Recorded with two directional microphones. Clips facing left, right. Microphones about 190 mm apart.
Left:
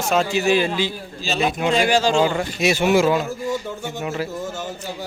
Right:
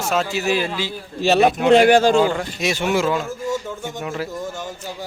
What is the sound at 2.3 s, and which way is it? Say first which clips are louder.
Speech: left 3 dB; 5° left (ahead or behind).